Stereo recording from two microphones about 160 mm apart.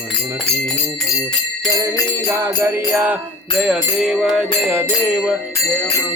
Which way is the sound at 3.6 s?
Centre (ahead or behind).